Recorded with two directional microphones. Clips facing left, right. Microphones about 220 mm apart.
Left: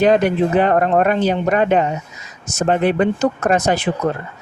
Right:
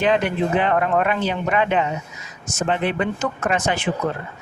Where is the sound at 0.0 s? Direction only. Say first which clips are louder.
Left 5 dB; 40° left (ahead or behind).